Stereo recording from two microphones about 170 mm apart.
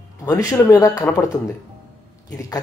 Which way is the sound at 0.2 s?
20° left (ahead or behind).